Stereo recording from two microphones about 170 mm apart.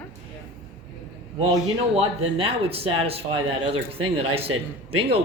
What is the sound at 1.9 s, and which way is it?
Speech, 35° right (ahead or behind).